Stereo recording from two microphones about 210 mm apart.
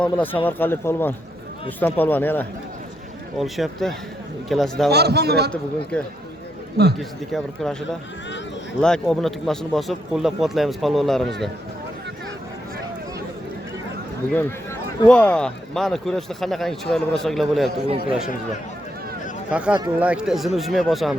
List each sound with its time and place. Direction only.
0.0 s a man's voice: 10° left (ahead or behind)
4.9 s a man's voice: 50° right (ahead or behind)
7.0 s a man's voice: centre (ahead or behind)
14.3 s a man's voice: 5° left (ahead or behind)
17.8 s speech: 25° right (ahead or behind)
19.5 s a man's voice: 5° right (ahead or behind)